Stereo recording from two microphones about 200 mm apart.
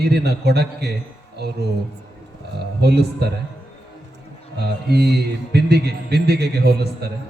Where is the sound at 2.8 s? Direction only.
55° right (ahead or behind).